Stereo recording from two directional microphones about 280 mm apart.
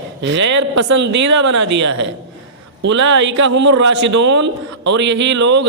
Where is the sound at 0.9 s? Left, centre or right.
Right.